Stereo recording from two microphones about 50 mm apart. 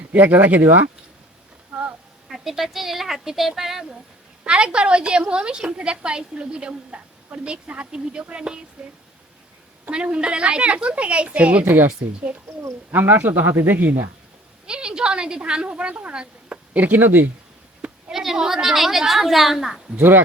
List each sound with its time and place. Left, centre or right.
0.1 s a man's voice: right
1.7 s a sound: centre
2.3 s a woman's voice: centre
4.4 s a woman's voice: centre
11.6 s speech: right
12.3 s a woman's voice: right
12.9 s a man's voice: right
14.7 s a woman's voice: centre
16.7 s speech: right
18.1 s a woman's voice: centre
20.0 s a man's voice: right